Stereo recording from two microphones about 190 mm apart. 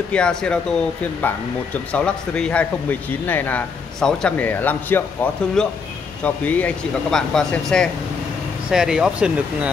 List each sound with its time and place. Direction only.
0.1 s speech: 5° left (ahead or behind)